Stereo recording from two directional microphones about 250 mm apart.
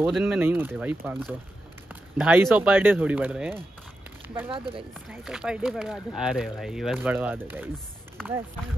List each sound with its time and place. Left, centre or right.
0.0 s speech: centre
4.3 s speech: centre
5.1 s speech: centre